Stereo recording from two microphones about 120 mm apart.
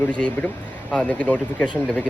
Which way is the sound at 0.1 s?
10° left (ahead or behind).